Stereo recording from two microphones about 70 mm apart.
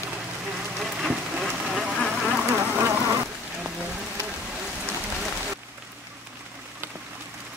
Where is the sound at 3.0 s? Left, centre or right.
Right.